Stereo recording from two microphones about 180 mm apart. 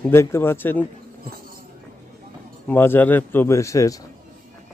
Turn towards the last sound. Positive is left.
turn(degrees=20)  # may be behind; listen again after turning